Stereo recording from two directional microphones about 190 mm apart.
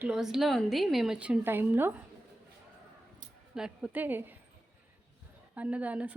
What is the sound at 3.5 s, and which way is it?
Music, 5° right (ahead or behind).